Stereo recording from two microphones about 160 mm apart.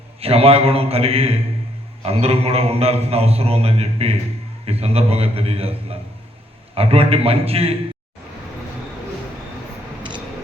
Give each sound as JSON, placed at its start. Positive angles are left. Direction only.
{"t": 0.2, "sound": "a man's voice", "side_deg": -35}